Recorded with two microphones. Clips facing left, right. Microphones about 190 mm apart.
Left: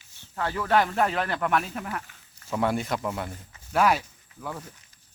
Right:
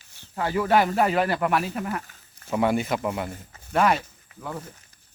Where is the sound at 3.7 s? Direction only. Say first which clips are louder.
Right 1 dB; 5° left (ahead or behind).